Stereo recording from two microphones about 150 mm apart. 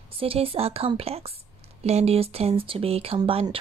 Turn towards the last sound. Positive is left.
turn(degrees=-35)  # may be behind; listen again after turning